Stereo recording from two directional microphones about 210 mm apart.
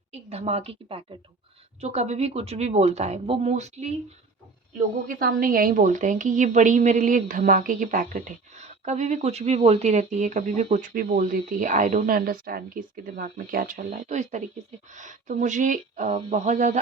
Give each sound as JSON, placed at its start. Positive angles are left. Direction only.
{"t": 0.1, "sound": "a woman's voice", "side_deg": -30}
{"t": 5.0, "sound": "a woman's voice", "side_deg": -40}